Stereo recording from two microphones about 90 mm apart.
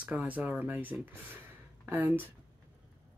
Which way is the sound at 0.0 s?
15° right (ahead or behind).